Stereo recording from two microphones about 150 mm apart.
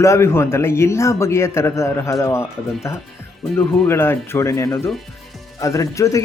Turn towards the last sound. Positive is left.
turn(degrees=20)  # may be behind; listen again after turning